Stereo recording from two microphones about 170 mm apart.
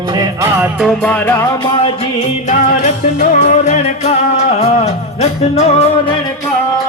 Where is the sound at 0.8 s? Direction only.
5° left (ahead or behind).